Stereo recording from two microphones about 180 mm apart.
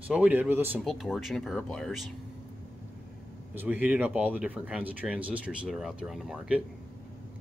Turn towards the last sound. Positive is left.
turn(degrees=-5)  # may be behind; listen again after turning